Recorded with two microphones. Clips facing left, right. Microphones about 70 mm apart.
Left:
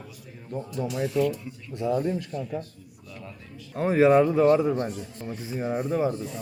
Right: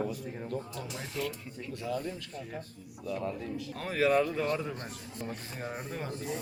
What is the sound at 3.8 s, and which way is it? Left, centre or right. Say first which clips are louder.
Speech: left 9 dB; left.